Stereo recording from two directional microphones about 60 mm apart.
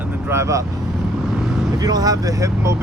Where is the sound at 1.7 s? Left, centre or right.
Right.